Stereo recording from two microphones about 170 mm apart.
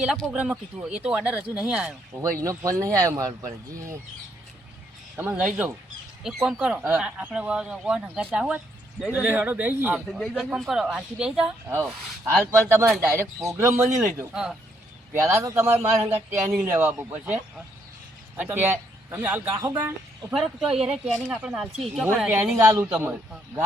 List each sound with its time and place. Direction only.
0.0 s speech: 5° right (ahead or behind)
2.4 s speech: 20° right (ahead or behind)
5.1 s speech: 10° right (ahead or behind)
11.7 s speech: 15° right (ahead or behind)
15.2 s speech: 15° right (ahead or behind); by 22.0 s centre (ahead or behind)
22.0 s speech: 10° right (ahead or behind)